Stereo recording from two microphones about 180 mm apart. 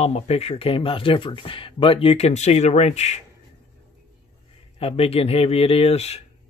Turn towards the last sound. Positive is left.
turn(degrees=35)  # may be behind; listen again after turning